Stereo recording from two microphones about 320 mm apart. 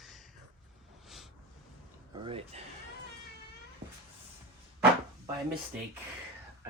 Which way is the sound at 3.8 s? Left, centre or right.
Right.